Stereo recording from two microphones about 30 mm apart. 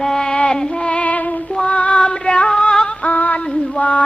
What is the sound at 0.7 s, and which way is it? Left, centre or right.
Female singing, left.